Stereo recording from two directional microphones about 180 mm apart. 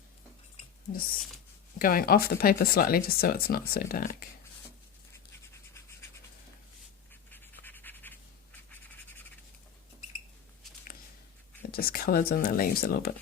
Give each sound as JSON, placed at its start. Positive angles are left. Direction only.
{"t": 1.8, "sound": "speech", "side_deg": 55}
{"t": 7.3, "sound": "scratch", "side_deg": 10}
{"t": 11.7, "sound": "speech", "side_deg": 55}